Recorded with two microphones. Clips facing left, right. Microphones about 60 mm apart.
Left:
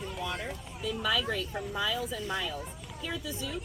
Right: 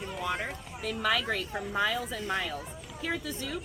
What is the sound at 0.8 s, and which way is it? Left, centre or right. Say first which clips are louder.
Speech: right 1 dB; right.